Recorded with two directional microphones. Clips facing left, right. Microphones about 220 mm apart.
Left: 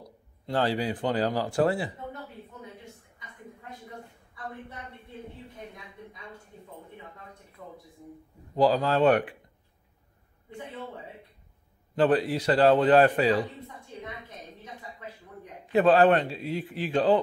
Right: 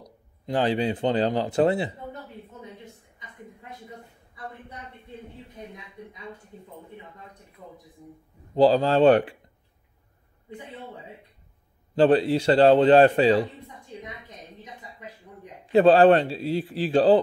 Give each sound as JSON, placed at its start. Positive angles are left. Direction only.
{"t": 0.5, "sound": "a man's voice", "side_deg": -20}
{"t": 8.5, "sound": "a man's voice", "side_deg": -30}
{"t": 11.9, "sound": "a man's voice", "side_deg": -30}
{"t": 15.6, "sound": "speech", "side_deg": -30}